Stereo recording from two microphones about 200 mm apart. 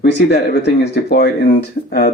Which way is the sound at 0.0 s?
55° left (ahead or behind).